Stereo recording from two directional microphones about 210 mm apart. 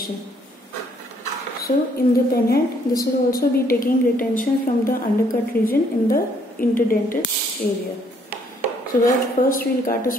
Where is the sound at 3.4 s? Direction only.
45° left (ahead or behind).